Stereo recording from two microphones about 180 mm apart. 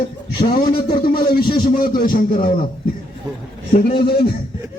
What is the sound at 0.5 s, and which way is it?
Speech, 55° left (ahead or behind).